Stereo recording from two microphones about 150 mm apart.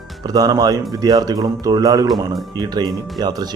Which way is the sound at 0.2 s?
25° right (ahead or behind).